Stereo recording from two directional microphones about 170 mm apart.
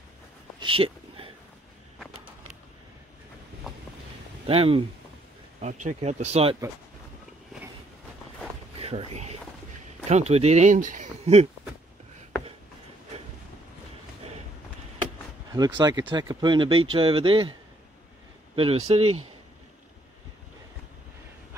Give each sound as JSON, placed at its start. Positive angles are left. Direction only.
{"t": 0.6, "sound": "a sound", "side_deg": -30}
{"t": 4.5, "sound": "speech", "side_deg": -35}
{"t": 5.6, "sound": "speech", "side_deg": -45}
{"t": 8.7, "sound": "speech", "side_deg": -35}
{"t": 15.5, "sound": "speech", "side_deg": -25}
{"t": 18.6, "sound": "speech", "side_deg": -35}